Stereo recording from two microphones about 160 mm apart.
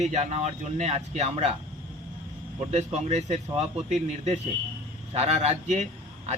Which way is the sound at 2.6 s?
45° right (ahead or behind).